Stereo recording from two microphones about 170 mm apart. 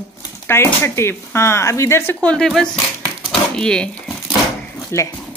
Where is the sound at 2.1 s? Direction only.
5° left (ahead or behind).